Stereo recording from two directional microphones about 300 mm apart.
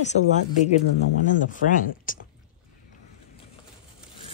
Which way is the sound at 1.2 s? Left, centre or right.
Left.